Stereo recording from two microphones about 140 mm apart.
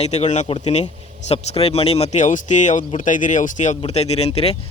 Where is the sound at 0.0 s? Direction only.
50° left (ahead or behind).